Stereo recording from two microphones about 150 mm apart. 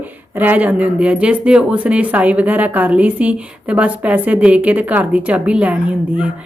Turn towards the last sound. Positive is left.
turn(degrees=-10)  # may be behind; listen again after turning